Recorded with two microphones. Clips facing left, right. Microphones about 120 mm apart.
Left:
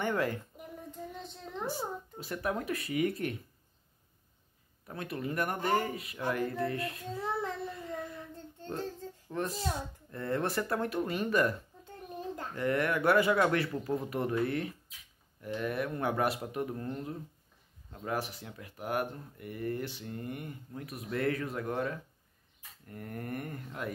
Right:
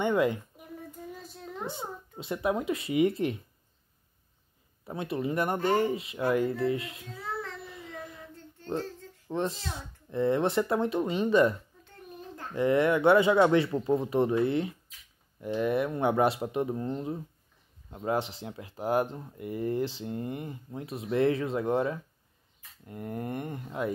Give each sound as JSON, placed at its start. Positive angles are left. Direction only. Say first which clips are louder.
{"t": 0.0, "sound": "a woman's voice", "louder": "right 6 dB", "side_deg": -20}
{"t": 0.6, "sound": "a sound", "louder": "even", "side_deg": -5}
{"t": 1.7, "sound": "speech", "louder": "left 2 dB", "side_deg": -25}
{"t": 4.8, "sound": "speech", "louder": "right 6 dB", "side_deg": -25}
{"t": 7.7, "sound": "child singing", "louder": "left 3 dB", "side_deg": -15}
{"t": 9.3, "sound": "speech", "louder": "right 5 dB", "side_deg": -25}
{"t": 9.6, "sound": "speech", "louder": "left 5 dB", "side_deg": 30}
{"t": 10.1, "sound": "speech", "louder": "right 7 dB", "side_deg": -20}
{"t": 12.5, "sound": "speech", "louder": "right 7 dB", "side_deg": -25}